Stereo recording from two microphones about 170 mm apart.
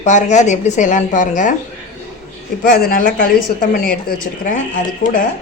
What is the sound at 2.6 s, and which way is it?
Speech, 65° left (ahead or behind).